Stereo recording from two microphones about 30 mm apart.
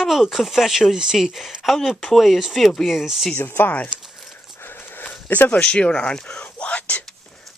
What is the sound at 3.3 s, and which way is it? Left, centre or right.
Speech, left.